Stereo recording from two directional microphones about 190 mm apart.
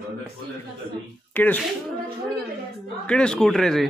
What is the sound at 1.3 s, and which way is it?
Speech, 10° left (ahead or behind).